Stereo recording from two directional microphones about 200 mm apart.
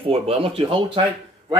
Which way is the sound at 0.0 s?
30° right (ahead or behind).